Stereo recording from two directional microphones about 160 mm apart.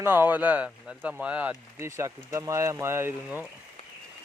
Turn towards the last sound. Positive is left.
turn(degrees=-15)  # may be behind; listen again after turning